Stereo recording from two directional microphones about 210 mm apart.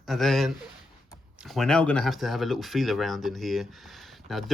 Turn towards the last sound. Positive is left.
turn(degrees=0)  # may be behind; listen again after turning